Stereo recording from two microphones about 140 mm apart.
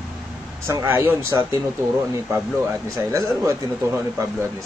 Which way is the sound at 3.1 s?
20° right (ahead or behind).